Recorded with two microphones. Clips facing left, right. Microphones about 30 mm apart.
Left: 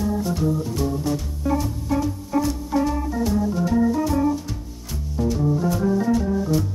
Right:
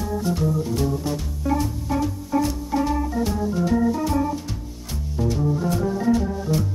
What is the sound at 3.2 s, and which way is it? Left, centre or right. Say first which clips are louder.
Organ: left 1 dB; centre.